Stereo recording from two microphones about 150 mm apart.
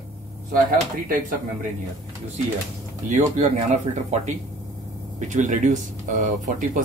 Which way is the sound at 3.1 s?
50° right (ahead or behind).